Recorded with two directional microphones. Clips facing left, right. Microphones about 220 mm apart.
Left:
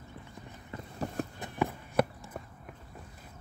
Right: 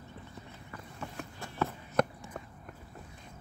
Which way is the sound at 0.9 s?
40° left (ahead or behind).